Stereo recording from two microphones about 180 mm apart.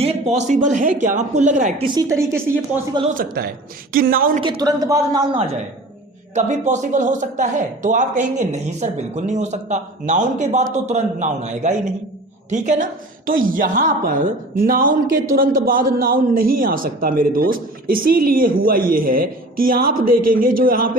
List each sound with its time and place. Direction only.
0.0 s a man's voice: 35° right (ahead or behind)
1.8 s a woman's voice: 20° right (ahead or behind)
3.2 s a man's voice: 55° right (ahead or behind)
4.4 s speech: 25° right (ahead or behind)
6.3 s a man's voice: 40° right (ahead or behind)